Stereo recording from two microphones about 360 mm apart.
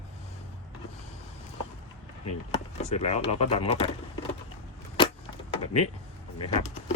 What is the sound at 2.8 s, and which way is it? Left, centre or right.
Speech, centre.